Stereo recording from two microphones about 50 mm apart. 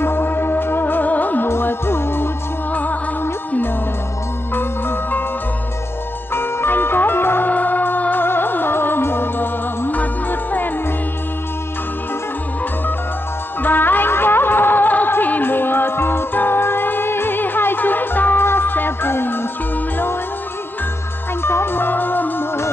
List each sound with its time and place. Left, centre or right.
0.0 s music: left
1.5 s music: left
2.7 s music: left
4.6 s music: left
6.3 s music: left
7.5 s music: left
13.6 s music: left
21.4 s music: left